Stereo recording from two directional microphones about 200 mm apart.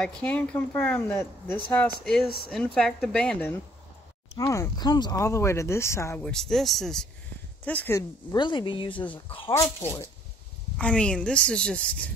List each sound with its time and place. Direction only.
0.0 s a woman's voice: 5° left (ahead or behind); by 9.5 s 25° left (ahead or behind)
9.5 s a woman's voice: 15° left (ahead or behind)